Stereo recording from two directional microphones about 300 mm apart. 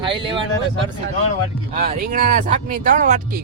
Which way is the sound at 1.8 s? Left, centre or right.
Right.